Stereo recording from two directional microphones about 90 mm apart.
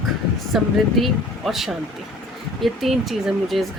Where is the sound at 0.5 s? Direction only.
Centre (ahead or behind).